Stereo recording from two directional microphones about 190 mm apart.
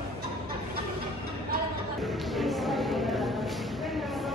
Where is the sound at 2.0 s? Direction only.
Centre (ahead or behind).